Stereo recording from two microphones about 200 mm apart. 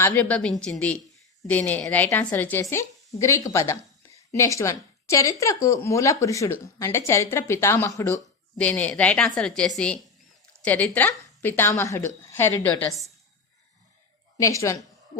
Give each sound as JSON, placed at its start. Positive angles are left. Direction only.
{"t": 0.0, "sound": "a woman's voice", "side_deg": 5}
{"t": 14.3, "sound": "a woman's voice", "side_deg": 15}